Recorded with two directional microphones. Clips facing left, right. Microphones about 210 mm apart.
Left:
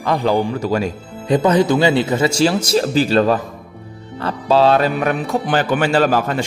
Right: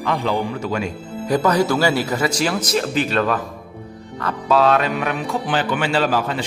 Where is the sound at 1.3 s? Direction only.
20° left (ahead or behind); by 6.4 s 50° left (ahead or behind).